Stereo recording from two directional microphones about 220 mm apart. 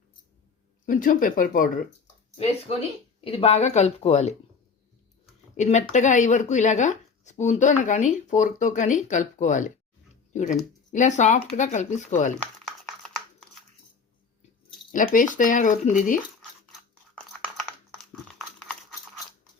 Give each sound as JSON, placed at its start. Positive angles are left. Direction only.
{"t": 0.9, "sound": "speech", "side_deg": 35}
{"t": 2.3, "sound": "speech", "side_deg": 25}
{"t": 5.5, "sound": "speech", "side_deg": 35}
{"t": 12.6, "sound": "a sound", "side_deg": 0}
{"t": 14.9, "sound": "speech", "side_deg": 35}
{"t": 17.6, "sound": "typing", "side_deg": 0}